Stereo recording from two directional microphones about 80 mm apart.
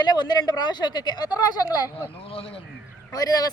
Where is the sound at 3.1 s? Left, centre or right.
Left.